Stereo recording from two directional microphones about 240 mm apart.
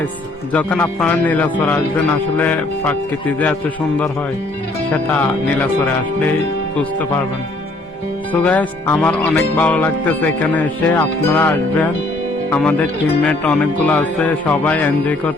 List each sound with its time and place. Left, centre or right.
0.5 s a man's voice: centre
8.3 s a man's voice: centre